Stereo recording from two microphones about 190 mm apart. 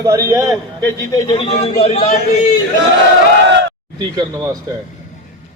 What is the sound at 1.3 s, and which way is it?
Speech, 30° left (ahead or behind).